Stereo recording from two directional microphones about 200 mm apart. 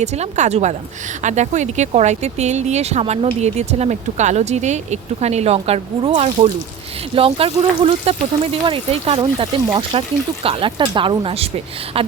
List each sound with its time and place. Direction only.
0.0 s speech: 35° right (ahead or behind)